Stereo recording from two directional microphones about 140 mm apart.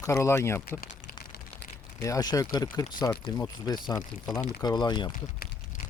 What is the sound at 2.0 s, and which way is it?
Speech, 25° left (ahead or behind).